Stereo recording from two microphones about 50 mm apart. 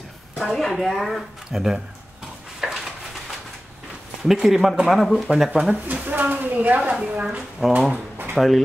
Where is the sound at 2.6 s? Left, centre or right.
Centre.